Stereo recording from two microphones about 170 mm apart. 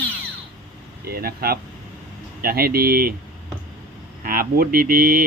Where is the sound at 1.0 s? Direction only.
65° right (ahead or behind).